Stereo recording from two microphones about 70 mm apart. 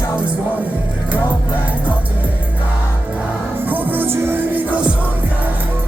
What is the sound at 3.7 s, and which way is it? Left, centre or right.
Music, right.